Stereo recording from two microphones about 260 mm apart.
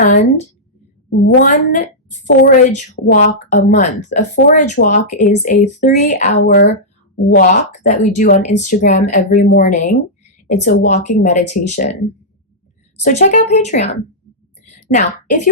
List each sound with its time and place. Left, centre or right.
0.0 s a woman's voice: left
6.4 s speech: left
7.3 s a woman's voice: left
13.1 s a woman's voice: left
14.7 s a sound: left